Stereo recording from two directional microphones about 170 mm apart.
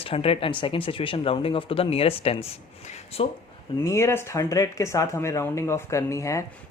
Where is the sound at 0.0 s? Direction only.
35° left (ahead or behind).